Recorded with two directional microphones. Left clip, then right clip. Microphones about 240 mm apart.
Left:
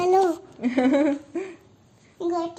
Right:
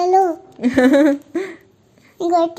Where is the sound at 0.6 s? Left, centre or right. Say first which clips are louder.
Right 9 dB; right.